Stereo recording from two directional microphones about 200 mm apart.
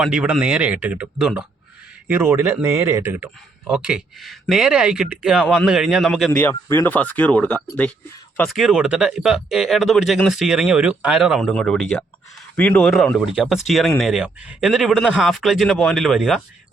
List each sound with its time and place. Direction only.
0.0 s a man's voice: 5° right (ahead or behind)
6.4 s speech: 10° left (ahead or behind)